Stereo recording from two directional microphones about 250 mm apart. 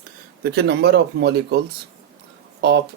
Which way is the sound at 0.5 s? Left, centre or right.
Right.